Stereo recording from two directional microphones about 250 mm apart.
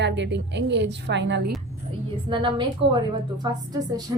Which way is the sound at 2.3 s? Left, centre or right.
Centre.